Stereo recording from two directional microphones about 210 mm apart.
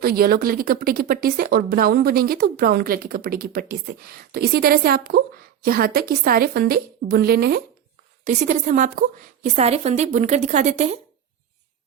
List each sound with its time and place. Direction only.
0.0 s speech: 45° right (ahead or behind)
8.2 s a woman's voice: 35° right (ahead or behind)